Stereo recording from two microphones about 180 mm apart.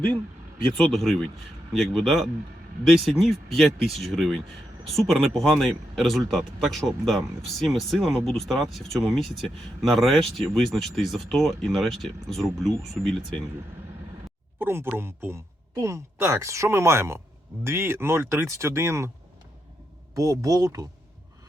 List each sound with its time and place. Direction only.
0.8 s speech: centre (ahead or behind)
14.6 s speech: 10° right (ahead or behind)
20.1 s speech: 20° right (ahead or behind)